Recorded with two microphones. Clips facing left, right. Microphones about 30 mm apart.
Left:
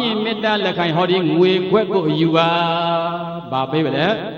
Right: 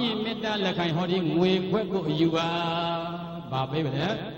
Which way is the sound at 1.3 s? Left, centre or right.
Left.